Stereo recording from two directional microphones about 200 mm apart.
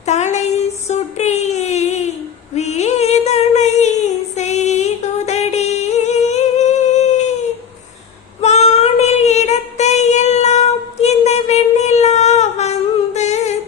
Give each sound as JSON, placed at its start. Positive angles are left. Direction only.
{"t": 0.0, "sound": "a sound", "side_deg": 35}
{"t": 8.4, "sound": "child singing", "side_deg": 35}
{"t": 13.1, "sound": "humming", "side_deg": 35}